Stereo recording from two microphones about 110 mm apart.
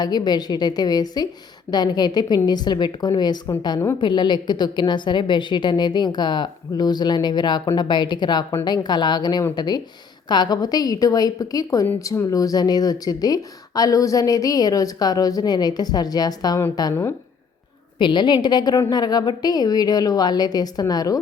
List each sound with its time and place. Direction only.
0.0 s a woman's voice: 40° left (ahead or behind)
16.9 s speech: 20° left (ahead or behind)
18.0 s a woman's voice: 45° left (ahead or behind)